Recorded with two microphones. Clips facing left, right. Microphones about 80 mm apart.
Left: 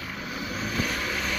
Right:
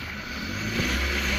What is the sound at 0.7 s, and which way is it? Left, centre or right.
Vehicle, left.